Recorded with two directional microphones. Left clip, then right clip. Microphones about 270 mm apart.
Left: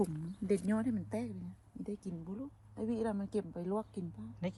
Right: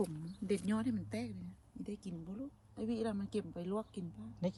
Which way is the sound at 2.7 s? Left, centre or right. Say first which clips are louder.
Left 2 dB; centre.